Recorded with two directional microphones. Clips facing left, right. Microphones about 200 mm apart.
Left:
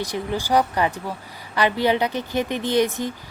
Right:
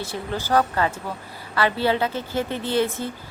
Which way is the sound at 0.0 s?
15° left (ahead or behind).